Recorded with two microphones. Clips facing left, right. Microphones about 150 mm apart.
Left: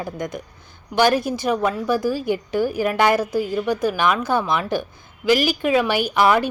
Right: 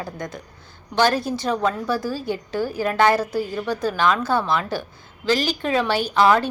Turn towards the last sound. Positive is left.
turn(degrees=15)  # may be behind; listen again after turning